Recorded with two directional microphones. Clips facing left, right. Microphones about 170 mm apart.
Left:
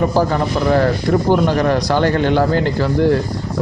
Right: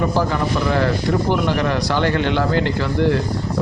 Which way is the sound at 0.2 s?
40° left (ahead or behind).